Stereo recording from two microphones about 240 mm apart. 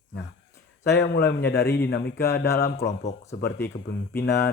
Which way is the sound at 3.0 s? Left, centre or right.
Left.